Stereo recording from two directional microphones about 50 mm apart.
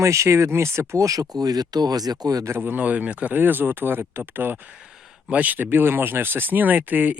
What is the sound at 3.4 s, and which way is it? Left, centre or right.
Speech, right.